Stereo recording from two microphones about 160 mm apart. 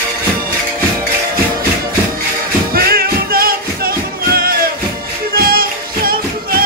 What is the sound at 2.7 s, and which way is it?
Music, 75° right (ahead or behind).